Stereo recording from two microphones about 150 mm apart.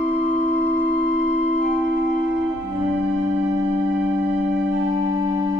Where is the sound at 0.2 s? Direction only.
15° right (ahead or behind).